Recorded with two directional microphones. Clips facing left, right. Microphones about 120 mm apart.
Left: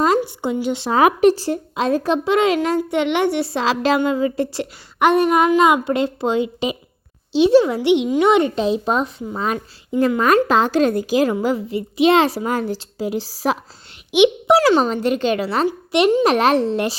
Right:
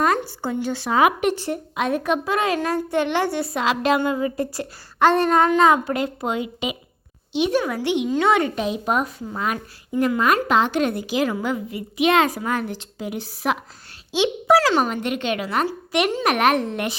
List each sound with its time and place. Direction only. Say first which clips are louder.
0.3 s a woman's voice: left 4 dB; 20° left (ahead or behind)
0.9 s a woman's voice: left 5 dB; 35° left (ahead or behind)
11.3 s a woman's voice: left 5 dB; 30° left (ahead or behind)
14.1 s a woman's voice: left 4 dB; 20° left (ahead or behind)